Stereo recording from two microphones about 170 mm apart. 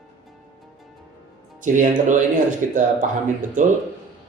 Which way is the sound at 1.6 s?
50° right (ahead or behind).